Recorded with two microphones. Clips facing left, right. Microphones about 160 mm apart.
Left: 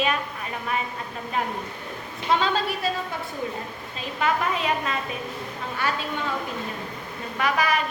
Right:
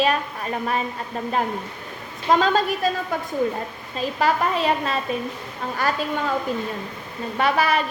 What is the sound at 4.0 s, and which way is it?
A woman's voice, 35° right (ahead or behind).